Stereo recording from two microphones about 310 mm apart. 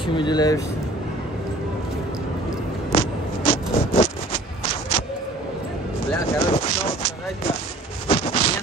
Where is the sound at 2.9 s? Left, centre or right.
Centre.